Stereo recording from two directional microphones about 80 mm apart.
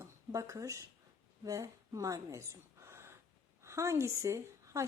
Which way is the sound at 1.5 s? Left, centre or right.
Right.